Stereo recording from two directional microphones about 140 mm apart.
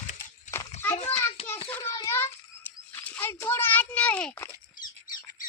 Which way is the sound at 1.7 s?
15° left (ahead or behind).